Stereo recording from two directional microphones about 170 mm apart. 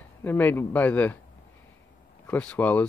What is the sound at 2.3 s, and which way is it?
Speech, 10° left (ahead or behind).